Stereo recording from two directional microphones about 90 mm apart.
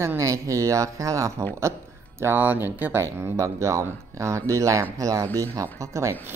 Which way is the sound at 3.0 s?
35° right (ahead or behind).